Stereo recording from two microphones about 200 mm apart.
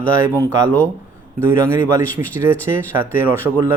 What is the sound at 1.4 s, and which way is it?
Speech, 15° right (ahead or behind).